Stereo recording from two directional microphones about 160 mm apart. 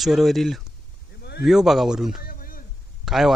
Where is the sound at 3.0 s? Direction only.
Centre (ahead or behind).